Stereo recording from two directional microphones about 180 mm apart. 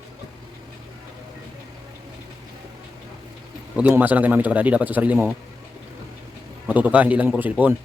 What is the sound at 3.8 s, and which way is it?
A man's voice, 10° right (ahead or behind).